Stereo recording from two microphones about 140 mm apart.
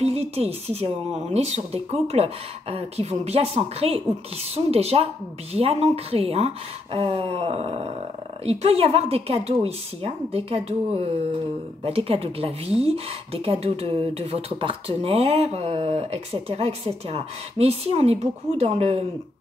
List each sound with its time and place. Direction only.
0.0 s speech: 50° right (ahead or behind)